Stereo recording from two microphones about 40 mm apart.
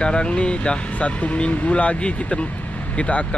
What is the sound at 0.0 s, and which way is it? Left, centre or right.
Speech, left.